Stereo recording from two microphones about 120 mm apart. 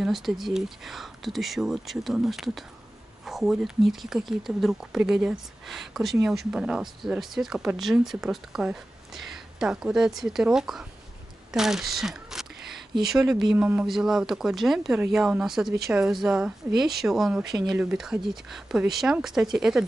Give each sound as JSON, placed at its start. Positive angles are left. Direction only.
{"t": 0.0, "sound": "speech", "side_deg": 0}
{"t": 11.5, "sound": "a sound", "side_deg": -5}
{"t": 13.0, "sound": "speech", "side_deg": -5}